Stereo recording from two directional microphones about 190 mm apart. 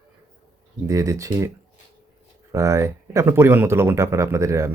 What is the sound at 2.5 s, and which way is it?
Speech, 15° right (ahead or behind).